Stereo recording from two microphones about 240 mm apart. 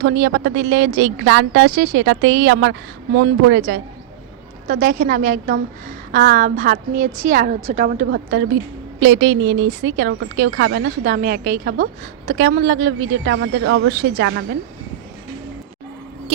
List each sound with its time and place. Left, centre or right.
0.0 s speech: right
4.7 s a woman's voice: right
8.1 s speech: right